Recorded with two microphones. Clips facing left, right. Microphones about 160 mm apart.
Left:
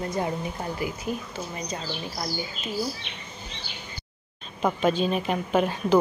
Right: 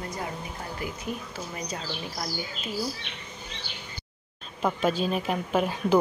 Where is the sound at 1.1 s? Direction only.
Centre (ahead or behind).